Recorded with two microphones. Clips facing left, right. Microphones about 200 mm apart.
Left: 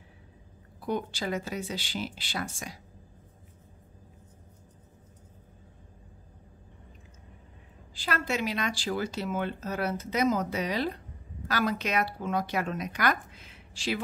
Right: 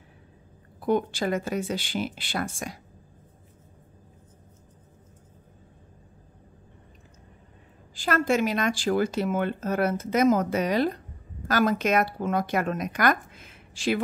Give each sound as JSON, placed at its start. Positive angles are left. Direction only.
{"t": 0.7, "sound": "speech", "side_deg": -55}
{"t": 7.9, "sound": "speech", "side_deg": -50}